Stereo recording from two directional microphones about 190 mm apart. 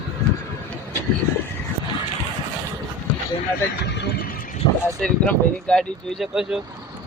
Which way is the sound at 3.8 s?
60° left (ahead or behind).